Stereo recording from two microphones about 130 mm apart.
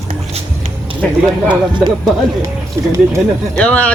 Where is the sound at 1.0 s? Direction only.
5° left (ahead or behind).